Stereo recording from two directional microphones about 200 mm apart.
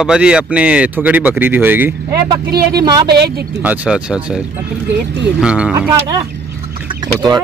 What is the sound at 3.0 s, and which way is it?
Speech, 55° right (ahead or behind).